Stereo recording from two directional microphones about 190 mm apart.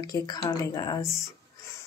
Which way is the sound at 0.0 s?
20° left (ahead or behind).